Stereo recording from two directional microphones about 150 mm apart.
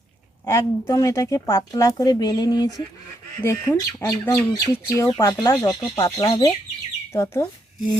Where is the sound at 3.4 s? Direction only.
15° left (ahead or behind).